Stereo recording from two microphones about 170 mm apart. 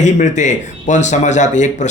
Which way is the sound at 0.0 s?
45° left (ahead or behind).